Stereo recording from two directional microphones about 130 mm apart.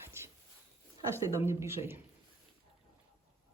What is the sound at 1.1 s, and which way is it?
Speech, 20° right (ahead or behind).